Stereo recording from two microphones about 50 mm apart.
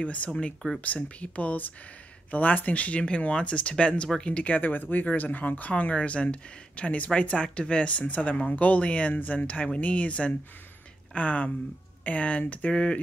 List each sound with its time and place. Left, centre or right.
0.0 s speech: left